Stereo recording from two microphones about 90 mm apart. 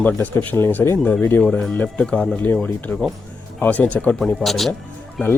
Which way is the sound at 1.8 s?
15° left (ahead or behind).